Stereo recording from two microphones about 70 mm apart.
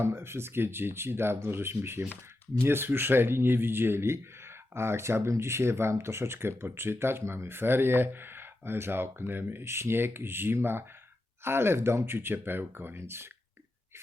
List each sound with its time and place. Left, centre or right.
0.0 s speech: right